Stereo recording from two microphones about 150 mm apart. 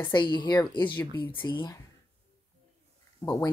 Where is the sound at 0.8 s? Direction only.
10° left (ahead or behind).